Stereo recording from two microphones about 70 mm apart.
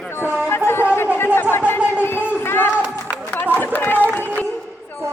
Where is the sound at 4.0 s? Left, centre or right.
Right.